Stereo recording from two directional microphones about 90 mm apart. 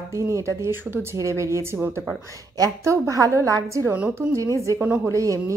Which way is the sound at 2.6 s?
35° right (ahead or behind).